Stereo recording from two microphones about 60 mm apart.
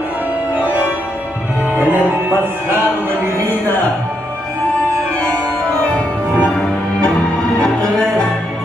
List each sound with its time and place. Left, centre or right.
0.6 s music: right
5.7 s music: left